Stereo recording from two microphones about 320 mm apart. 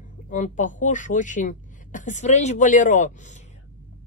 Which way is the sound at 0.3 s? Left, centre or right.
Left.